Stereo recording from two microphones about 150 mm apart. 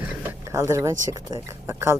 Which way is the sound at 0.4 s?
20° right (ahead or behind).